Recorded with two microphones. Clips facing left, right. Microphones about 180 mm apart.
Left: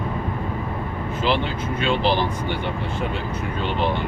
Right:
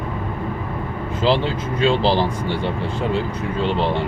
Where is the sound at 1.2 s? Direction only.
30° right (ahead or behind).